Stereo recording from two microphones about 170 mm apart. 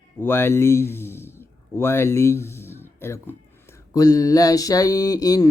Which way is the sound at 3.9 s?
20° left (ahead or behind).